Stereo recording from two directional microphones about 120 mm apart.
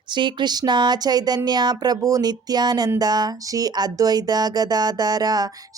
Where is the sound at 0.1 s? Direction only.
40° right (ahead or behind).